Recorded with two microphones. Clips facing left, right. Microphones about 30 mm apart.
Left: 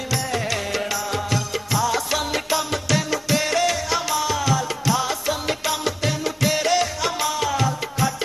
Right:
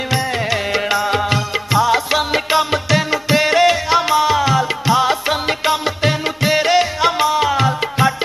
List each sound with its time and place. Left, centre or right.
0.1 s music: right